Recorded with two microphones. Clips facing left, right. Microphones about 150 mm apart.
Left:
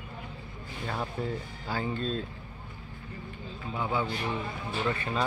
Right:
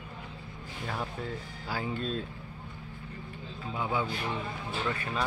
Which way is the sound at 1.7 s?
5° right (ahead or behind).